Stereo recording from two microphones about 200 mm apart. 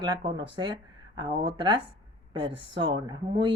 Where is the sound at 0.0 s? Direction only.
20° right (ahead or behind).